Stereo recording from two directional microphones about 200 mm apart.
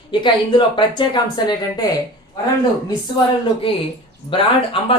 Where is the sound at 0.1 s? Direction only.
25° left (ahead or behind).